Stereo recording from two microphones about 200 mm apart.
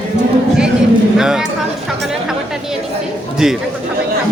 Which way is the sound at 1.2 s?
5° right (ahead or behind).